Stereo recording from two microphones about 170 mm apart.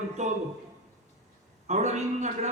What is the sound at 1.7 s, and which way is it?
Speech, 45° right (ahead or behind).